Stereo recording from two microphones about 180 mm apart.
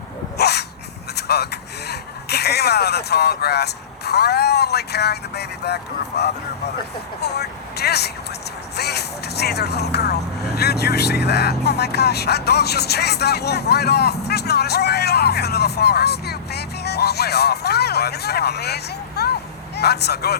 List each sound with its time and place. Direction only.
0.3 s dog: 65° left (ahead or behind)
1.1 s speech: 65° left (ahead or behind)